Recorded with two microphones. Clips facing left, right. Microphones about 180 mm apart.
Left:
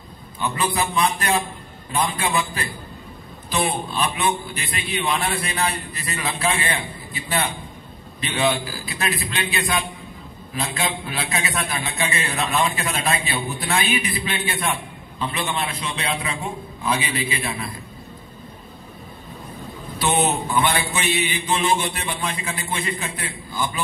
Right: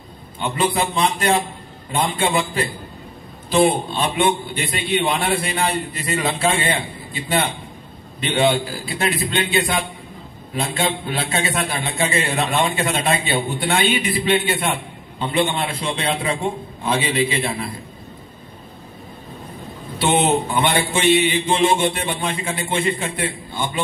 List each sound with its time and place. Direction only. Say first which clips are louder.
0.4 s a man's voice: right 3 dB; 25° right (ahead or behind)
8.3 s a man's voice: right 4 dB; 30° right (ahead or behind)
20.0 s a man's voice: right 4 dB; 25° right (ahead or behind)